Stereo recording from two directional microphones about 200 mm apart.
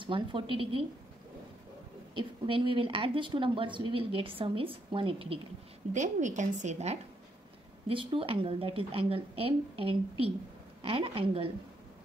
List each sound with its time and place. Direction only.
0.0 s a woman's voice: 25° right (ahead or behind)
2.1 s a woman's voice: 25° right (ahead or behind)
5.9 s a woman's voice: 35° right (ahead or behind)